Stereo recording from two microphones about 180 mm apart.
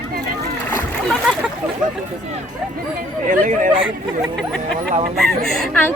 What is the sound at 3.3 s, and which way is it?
Speech, 45° right (ahead or behind).